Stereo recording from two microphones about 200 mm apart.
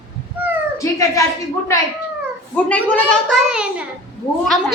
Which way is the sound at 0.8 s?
15° left (ahead or behind).